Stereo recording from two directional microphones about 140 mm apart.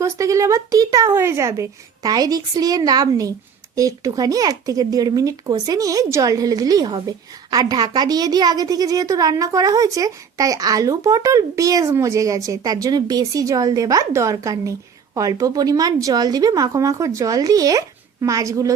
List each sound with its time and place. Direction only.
0.0 s a woman's voice: 20° right (ahead or behind)